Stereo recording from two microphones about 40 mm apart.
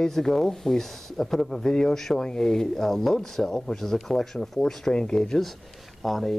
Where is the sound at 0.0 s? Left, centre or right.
Centre.